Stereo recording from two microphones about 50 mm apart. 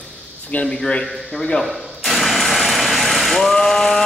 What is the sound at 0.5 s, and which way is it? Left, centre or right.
Speech, left.